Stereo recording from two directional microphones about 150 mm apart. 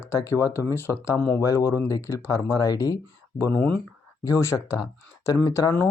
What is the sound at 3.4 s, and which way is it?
Speech, 10° left (ahead or behind).